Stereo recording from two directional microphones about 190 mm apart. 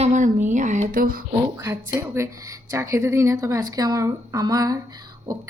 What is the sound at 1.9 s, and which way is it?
A woman's voice, 15° right (ahead or behind).